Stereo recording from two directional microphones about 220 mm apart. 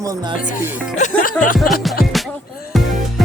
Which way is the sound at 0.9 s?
35° left (ahead or behind).